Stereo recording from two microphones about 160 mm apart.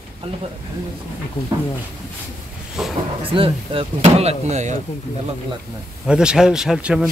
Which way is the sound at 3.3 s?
35° right (ahead or behind).